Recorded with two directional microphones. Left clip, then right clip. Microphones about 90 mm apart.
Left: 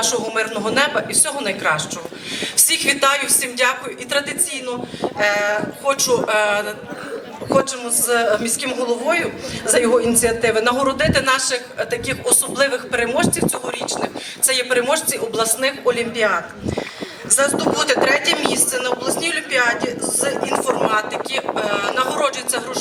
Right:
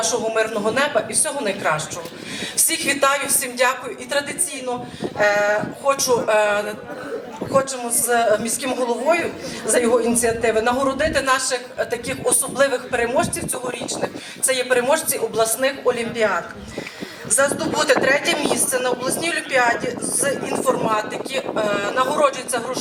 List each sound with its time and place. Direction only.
0.0 s a woman's voice: 30° left (ahead or behind)
17.3 s a woman's voice: 25° left (ahead or behind)